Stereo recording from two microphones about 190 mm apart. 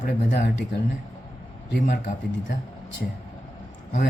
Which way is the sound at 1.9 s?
45° left (ahead or behind).